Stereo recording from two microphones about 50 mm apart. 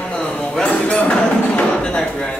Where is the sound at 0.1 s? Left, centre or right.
Left.